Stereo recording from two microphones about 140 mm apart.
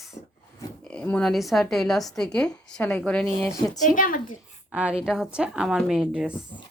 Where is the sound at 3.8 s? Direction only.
70° left (ahead or behind).